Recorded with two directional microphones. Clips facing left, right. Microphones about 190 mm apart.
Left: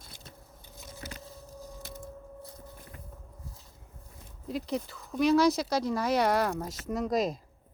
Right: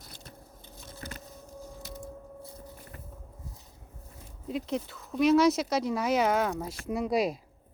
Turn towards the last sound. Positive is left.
turn(degrees=-10)  # may be behind; listen again after turning